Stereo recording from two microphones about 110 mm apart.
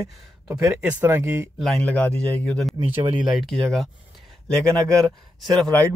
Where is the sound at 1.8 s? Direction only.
10° left (ahead or behind).